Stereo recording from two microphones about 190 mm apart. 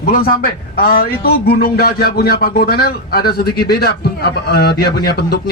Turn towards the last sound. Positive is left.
turn(degrees=55)  # may be behind; listen again after turning